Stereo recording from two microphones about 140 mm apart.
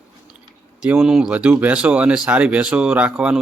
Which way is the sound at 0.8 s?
5° right (ahead or behind).